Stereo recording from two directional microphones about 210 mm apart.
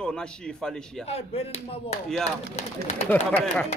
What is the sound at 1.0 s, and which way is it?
Speech, 30° left (ahead or behind).